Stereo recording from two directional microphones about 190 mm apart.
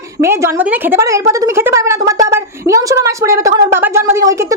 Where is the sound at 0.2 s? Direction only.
15° right (ahead or behind).